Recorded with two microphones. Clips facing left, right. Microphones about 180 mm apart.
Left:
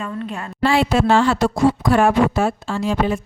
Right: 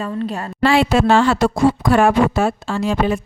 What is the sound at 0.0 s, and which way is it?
Speech, 35° right (ahead or behind).